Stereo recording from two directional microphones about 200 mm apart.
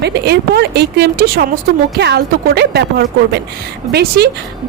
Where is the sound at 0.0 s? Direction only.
55° right (ahead or behind).